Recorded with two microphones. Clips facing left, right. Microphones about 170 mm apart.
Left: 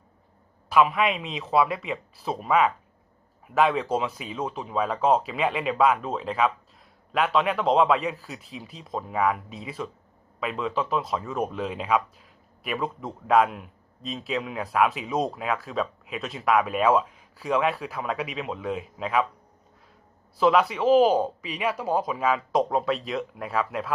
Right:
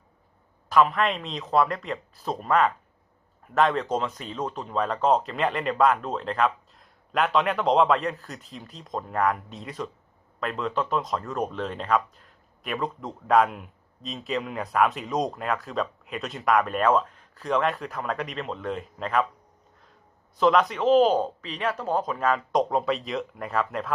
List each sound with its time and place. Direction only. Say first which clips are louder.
0.7 s speech: even; 5° left (ahead or behind)
20.4 s speech: even; 5° left (ahead or behind)